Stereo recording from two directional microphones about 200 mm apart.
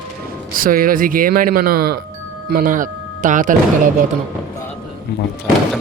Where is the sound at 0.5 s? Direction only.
45° right (ahead or behind).